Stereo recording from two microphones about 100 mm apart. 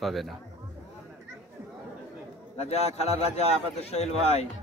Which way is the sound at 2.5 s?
90° left.